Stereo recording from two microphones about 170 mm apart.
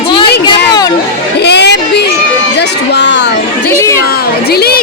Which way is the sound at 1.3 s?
80° left.